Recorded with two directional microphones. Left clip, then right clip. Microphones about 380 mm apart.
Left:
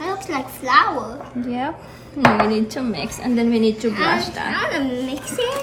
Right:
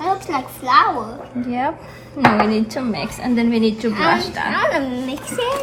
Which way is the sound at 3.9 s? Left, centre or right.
Centre.